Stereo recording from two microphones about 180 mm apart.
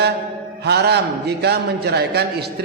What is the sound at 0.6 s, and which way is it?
A man's voice, 65° right (ahead or behind).